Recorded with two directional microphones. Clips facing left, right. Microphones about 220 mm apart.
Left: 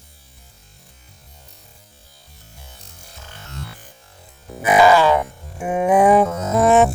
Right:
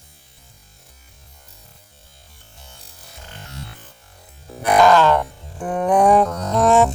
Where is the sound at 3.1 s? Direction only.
15° right (ahead or behind).